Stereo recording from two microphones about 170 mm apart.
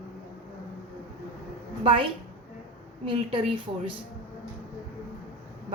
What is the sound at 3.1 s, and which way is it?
Speech, 30° right (ahead or behind).